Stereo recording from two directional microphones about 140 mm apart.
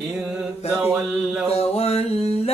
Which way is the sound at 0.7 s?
15° right (ahead or behind).